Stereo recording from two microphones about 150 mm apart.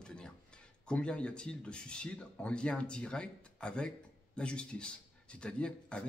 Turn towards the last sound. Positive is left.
turn(degrees=5)  # may be behind; listen again after turning